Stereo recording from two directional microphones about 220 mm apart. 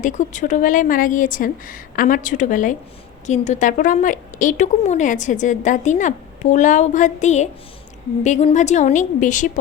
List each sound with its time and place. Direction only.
0.0 s a woman's voice: 35° left (ahead or behind)